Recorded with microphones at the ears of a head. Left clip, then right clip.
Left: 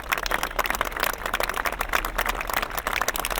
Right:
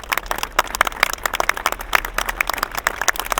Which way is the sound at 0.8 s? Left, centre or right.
Right.